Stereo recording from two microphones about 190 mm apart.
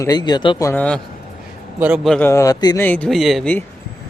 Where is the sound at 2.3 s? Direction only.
15° left (ahead or behind).